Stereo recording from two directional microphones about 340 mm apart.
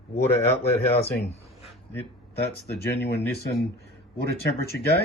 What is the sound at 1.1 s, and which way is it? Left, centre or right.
Speech, left.